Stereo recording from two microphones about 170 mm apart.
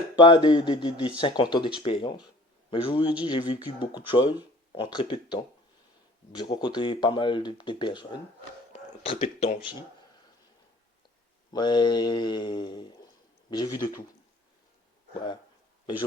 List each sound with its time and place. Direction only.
0.2 s a man's voice: 30° left (ahead or behind)
9.0 s a man's voice: 40° left (ahead or behind)
11.5 s speech: 25° left (ahead or behind)